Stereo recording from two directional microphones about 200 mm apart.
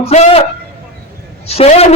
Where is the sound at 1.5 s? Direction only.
30° left (ahead or behind).